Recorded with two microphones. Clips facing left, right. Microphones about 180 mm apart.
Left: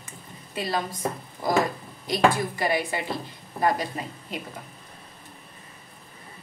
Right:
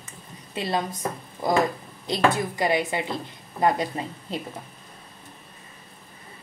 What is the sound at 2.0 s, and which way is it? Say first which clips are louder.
A woman's voice: left 1 dB; 20° right (ahead or behind).